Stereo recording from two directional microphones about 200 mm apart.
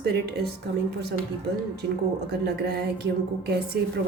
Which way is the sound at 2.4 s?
50° right (ahead or behind).